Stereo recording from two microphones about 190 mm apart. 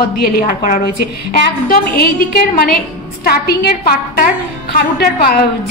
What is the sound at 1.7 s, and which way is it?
A woman's voice, 50° left (ahead or behind).